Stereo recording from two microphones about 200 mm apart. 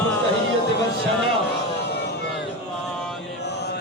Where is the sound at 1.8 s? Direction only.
55° left (ahead or behind).